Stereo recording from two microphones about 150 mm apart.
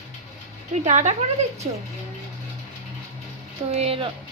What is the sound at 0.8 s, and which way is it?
Speech, 50° right (ahead or behind).